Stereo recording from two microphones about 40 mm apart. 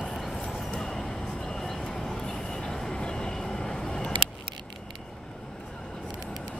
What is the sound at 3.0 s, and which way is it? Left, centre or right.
Vehicle, centre.